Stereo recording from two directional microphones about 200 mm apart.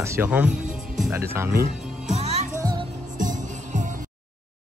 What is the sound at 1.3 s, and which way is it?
Speech, 15° right (ahead or behind).